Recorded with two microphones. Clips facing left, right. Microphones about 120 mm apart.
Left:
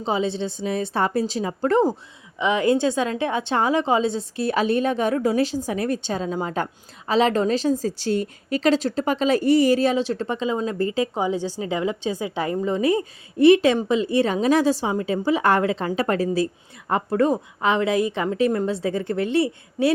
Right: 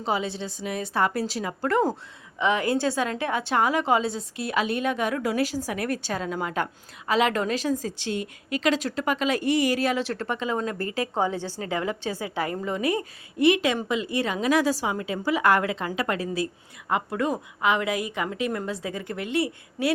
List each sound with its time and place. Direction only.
0.0 s a woman's voice: 25° left (ahead or behind)